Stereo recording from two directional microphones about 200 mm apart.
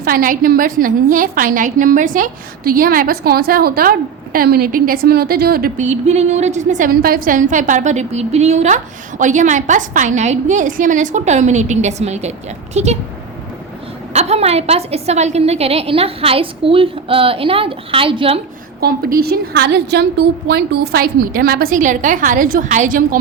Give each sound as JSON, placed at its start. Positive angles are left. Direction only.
{"t": 0.0, "sound": "a woman's voice", "side_deg": -45}
{"t": 14.1, "sound": "a woman's voice", "side_deg": -35}
{"t": 18.8, "sound": "a woman's voice", "side_deg": -50}